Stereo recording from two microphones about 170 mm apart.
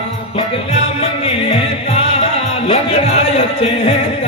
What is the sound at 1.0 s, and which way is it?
Music, 35° left (ahead or behind).